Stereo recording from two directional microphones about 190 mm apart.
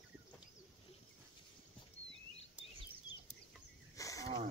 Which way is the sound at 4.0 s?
15° left (ahead or behind).